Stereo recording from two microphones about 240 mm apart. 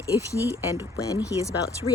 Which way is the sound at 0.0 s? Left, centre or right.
Centre.